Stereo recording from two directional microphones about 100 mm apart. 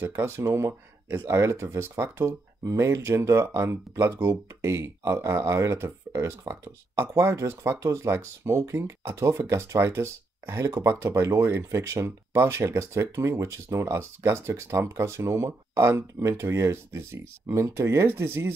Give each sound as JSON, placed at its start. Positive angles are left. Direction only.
{"t": 0.0, "sound": "speech", "side_deg": -25}